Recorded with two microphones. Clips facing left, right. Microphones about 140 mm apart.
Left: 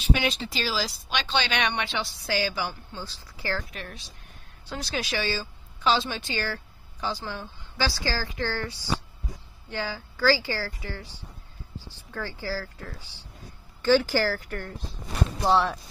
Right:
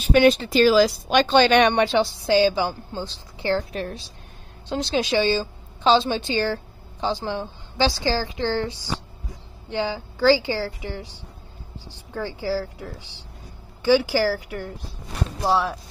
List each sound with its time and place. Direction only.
0.0 s speech: 50° right (ahead or behind)
2.0 s a woman's voice: 25° right (ahead or behind)
12.1 s speech: 15° right (ahead or behind)